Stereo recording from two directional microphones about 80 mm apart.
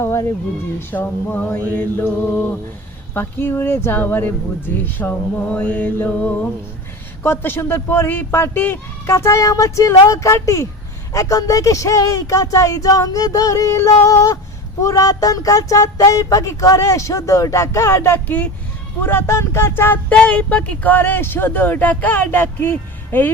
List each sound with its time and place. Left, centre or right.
0.0 s speech: left; by 6.5 s centre
7.2 s speech: left
20.1 s speech: centre